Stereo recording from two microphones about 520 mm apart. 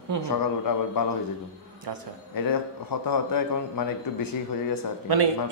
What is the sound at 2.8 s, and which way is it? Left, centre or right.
Speech, left.